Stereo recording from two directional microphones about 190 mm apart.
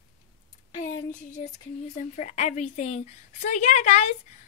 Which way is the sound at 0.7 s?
40° left (ahead or behind).